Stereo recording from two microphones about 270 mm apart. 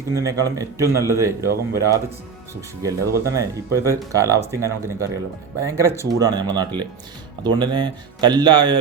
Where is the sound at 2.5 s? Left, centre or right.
Centre.